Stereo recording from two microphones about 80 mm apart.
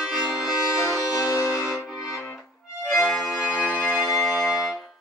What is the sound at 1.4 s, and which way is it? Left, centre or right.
Music, centre.